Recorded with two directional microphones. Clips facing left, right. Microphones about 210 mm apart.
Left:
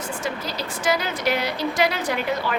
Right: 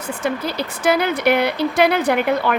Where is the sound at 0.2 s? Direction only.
60° right (ahead or behind).